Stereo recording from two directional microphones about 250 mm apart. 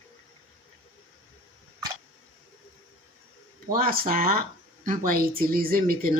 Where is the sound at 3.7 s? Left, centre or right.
Right.